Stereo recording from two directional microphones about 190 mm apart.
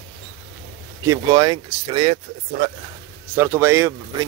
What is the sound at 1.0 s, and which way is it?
Speech, 20° right (ahead or behind).